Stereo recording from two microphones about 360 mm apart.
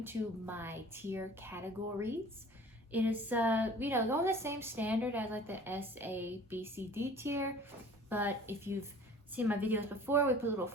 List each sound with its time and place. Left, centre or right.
0.0 s a woman's voice: centre